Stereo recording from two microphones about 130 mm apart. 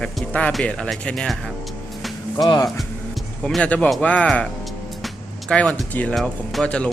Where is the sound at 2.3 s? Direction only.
30° left (ahead or behind).